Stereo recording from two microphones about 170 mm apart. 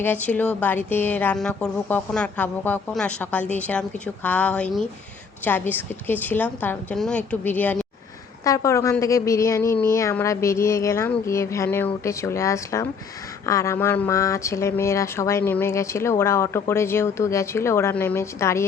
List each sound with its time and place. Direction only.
0.0 s speech: 10° left (ahead or behind)